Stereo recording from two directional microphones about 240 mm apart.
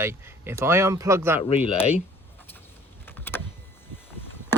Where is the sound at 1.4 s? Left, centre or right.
Left.